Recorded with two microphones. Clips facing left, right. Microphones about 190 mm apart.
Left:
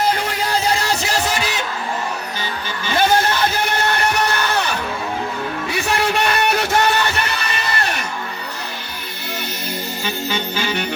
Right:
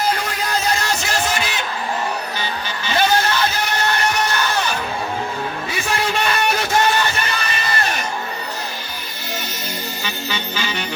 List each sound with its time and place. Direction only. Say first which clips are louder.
0.3 s music: left 2 dB; 30° left (ahead or behind)
2.8 s music: left 2 dB; 50° left (ahead or behind)
5.7 s music: left 3 dB; 65° left (ahead or behind)
10.0 s music: left 6 dB; 50° left (ahead or behind)